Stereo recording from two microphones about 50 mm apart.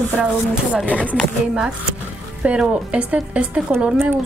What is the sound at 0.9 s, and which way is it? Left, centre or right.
Speech, left.